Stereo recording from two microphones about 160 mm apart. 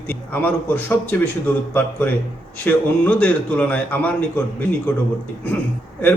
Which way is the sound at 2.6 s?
10° left (ahead or behind).